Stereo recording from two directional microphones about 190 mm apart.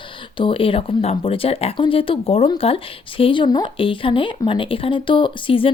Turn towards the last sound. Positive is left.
turn(degrees=25)  # may be behind; listen again after turning